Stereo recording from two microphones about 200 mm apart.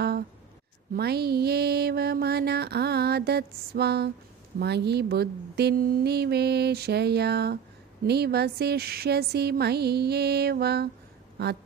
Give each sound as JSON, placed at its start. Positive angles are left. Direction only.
{"t": 0.9, "sound": "mantra", "side_deg": -50}
{"t": 4.6, "sound": "speech", "side_deg": -55}
{"t": 8.0, "sound": "mantra", "side_deg": -55}